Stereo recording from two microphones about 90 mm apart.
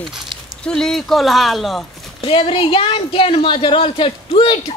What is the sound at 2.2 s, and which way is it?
A man's voice, 80° left.